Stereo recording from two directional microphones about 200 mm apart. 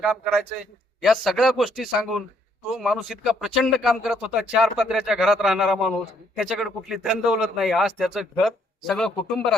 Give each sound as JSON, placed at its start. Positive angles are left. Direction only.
{"t": 0.0, "sound": "speech", "side_deg": 0}